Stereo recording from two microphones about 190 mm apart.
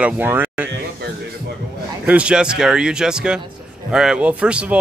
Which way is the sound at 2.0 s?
5° right (ahead or behind).